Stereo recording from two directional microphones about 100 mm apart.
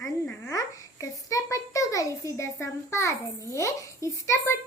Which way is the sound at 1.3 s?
35° left (ahead or behind).